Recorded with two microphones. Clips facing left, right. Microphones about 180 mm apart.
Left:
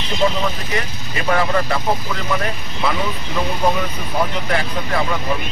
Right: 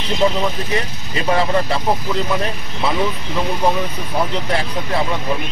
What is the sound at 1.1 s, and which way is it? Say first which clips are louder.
Speech: right 1 dB; 25° right (ahead or behind).